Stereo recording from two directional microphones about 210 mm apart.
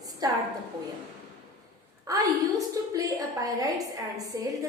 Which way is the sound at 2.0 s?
15° right (ahead or behind).